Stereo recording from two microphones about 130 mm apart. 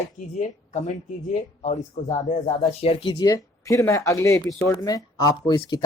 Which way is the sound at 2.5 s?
50° left (ahead or behind).